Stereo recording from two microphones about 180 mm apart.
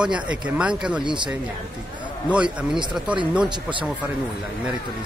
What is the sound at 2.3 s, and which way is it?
Speech, 5° right (ahead or behind).